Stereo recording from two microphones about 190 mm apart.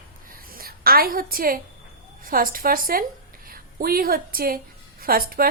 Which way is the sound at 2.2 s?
50° right (ahead or behind).